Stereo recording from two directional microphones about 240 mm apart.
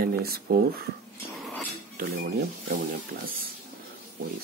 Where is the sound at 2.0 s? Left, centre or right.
Right.